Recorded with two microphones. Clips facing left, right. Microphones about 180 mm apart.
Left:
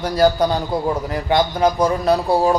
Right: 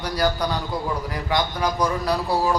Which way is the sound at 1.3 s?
25° left (ahead or behind).